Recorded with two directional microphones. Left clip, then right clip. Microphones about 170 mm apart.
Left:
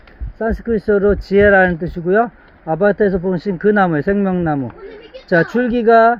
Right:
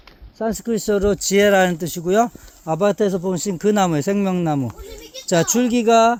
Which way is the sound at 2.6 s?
30° right (ahead or behind).